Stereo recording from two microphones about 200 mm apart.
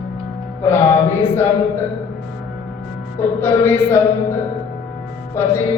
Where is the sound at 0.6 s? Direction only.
10° left (ahead or behind).